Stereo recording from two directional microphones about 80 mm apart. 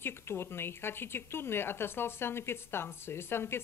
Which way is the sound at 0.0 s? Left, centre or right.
Left.